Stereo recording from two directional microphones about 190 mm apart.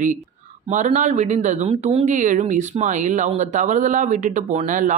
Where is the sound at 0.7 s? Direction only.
40° right (ahead or behind).